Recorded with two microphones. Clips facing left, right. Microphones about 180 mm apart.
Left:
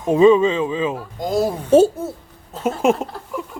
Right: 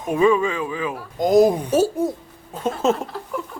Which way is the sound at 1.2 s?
20° right (ahead or behind).